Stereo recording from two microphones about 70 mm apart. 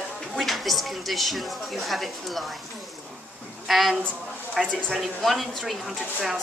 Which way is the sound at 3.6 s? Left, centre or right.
Centre.